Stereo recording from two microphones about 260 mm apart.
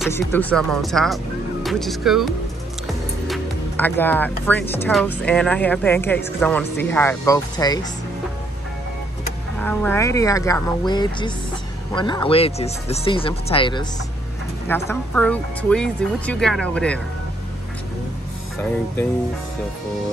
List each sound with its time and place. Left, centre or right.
0.1 s speech: centre
9.6 s speech: centre
14.7 s speech: centre